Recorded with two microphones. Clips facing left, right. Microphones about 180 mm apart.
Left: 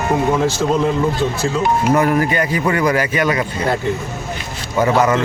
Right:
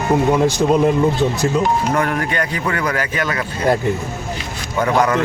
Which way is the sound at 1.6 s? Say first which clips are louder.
Left 6 dB; 10° left (ahead or behind).